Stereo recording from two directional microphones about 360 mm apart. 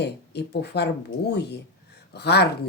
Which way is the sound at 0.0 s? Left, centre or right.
Left.